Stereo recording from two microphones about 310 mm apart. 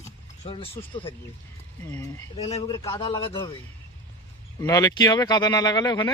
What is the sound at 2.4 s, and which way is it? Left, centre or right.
Speech, centre.